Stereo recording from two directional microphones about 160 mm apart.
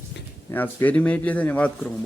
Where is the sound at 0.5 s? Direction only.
10° left (ahead or behind).